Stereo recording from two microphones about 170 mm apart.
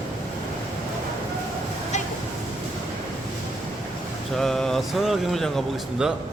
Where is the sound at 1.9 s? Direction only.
45° left (ahead or behind).